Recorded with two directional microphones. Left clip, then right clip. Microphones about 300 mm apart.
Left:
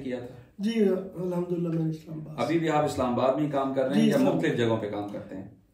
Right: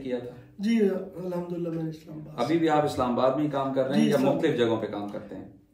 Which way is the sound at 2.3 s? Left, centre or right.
Centre.